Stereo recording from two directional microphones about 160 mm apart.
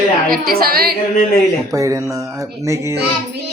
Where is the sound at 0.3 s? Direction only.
70° right (ahead or behind).